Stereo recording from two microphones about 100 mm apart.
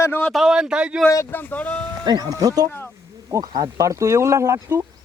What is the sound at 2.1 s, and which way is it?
Speech, 40° right (ahead or behind).